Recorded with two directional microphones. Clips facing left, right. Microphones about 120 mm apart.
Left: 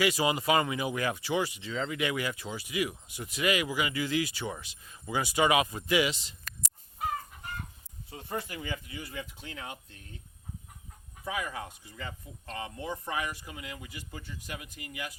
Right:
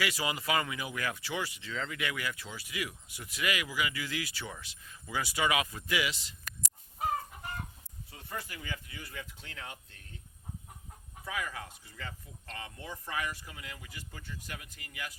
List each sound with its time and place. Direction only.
0.0 s speech: 20° left (ahead or behind)
8.1 s speech: 25° left (ahead or behind)
11.3 s speech: 20° left (ahead or behind)